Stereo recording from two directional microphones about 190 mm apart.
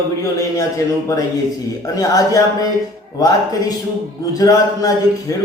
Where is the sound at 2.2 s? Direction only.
20° left (ahead or behind).